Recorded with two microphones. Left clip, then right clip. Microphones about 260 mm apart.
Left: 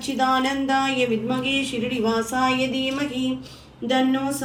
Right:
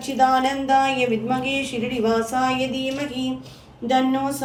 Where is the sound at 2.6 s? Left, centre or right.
Centre.